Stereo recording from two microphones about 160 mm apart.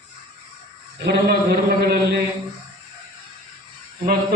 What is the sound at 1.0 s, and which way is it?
A man's voice, 85° right.